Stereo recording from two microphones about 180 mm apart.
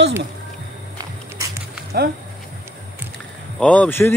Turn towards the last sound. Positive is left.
turn(degrees=10)  # may be behind; listen again after turning